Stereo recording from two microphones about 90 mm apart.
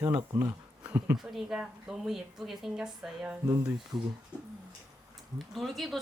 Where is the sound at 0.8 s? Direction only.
20° right (ahead or behind).